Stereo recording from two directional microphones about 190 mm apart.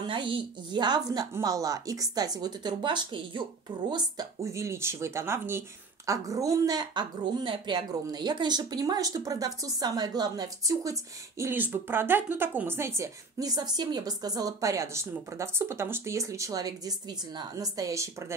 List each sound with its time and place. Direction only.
0.0 s a woman's voice: 25° right (ahead or behind)